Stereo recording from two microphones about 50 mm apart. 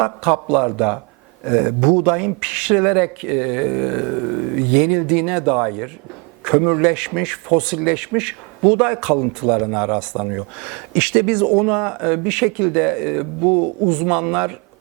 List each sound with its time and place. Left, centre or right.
0.0 s speech: centre
1.5 s speech: right